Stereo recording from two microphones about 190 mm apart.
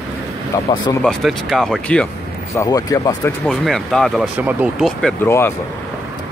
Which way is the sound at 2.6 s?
20° left (ahead or behind).